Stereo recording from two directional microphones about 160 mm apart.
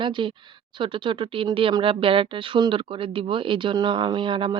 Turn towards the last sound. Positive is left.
turn(degrees=-30)  # may be behind; listen again after turning